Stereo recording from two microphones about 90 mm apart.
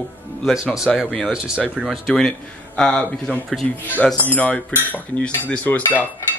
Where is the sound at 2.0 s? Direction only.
5° left (ahead or behind).